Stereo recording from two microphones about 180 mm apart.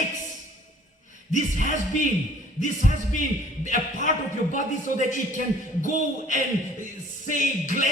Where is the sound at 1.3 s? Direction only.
45° left (ahead or behind).